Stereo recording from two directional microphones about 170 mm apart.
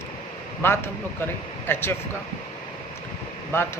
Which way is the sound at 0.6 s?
15° left (ahead or behind).